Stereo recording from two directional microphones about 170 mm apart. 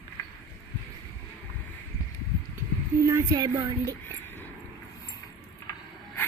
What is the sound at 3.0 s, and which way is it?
Speech, 20° right (ahead or behind).